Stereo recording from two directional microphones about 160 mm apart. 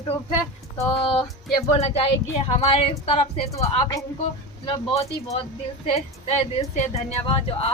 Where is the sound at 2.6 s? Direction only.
40° left (ahead or behind).